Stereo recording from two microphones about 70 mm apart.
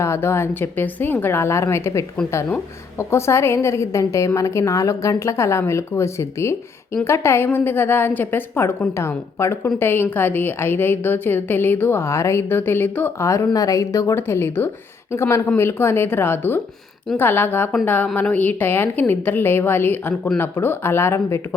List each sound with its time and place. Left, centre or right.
0.0 s a woman's voice: left
3.0 s a woman's voice: left
13.2 s a woman's voice: left
14.2 s a woman's voice: left